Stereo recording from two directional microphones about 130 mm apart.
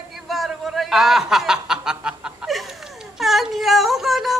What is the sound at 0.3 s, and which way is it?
Snicker, centre (ahead or behind).